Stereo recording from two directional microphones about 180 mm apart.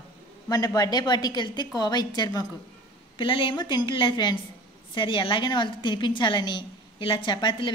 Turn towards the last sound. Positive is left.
turn(degrees=25)  # may be behind; listen again after turning